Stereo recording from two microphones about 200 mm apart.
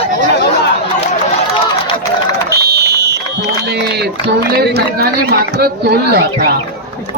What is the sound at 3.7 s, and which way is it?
Speech, 55° right (ahead or behind).